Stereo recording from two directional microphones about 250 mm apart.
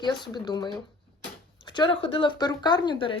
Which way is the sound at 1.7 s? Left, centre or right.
Centre.